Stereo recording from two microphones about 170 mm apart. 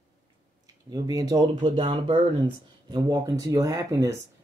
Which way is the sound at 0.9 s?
25° right (ahead or behind).